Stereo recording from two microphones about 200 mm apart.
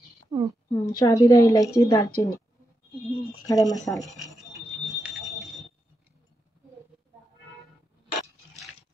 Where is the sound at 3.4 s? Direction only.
20° left (ahead or behind).